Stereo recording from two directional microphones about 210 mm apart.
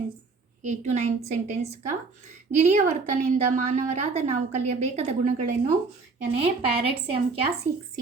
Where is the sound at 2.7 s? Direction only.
35° right (ahead or behind).